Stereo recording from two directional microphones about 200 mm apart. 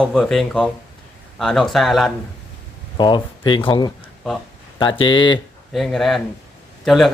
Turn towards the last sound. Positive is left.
turn(degrees=0)  # may be behind; listen again after turning